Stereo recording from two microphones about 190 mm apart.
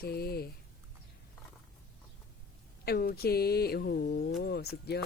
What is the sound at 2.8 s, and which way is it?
Mantra, 55° left (ahead or behind).